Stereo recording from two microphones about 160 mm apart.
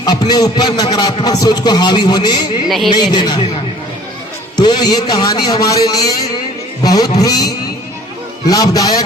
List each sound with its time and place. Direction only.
0.0 s a man's voice: 25° left (ahead or behind)
2.6 s speech: centre (ahead or behind)
2.9 s a man's voice: 30° left (ahead or behind)
4.5 s a man's voice: 25° left (ahead or behind)